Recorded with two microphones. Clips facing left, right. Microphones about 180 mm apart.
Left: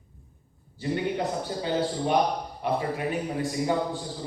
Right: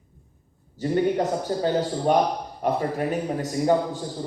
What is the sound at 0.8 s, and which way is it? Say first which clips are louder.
A man's voice: right 5 dB; 45° right (ahead or behind).